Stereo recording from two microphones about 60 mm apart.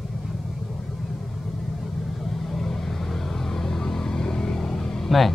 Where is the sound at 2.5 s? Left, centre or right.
Centre.